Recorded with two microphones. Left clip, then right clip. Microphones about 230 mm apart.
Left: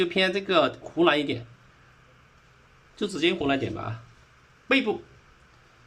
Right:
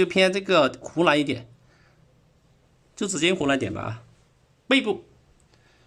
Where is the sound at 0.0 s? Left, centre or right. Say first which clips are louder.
Right 4 dB; right.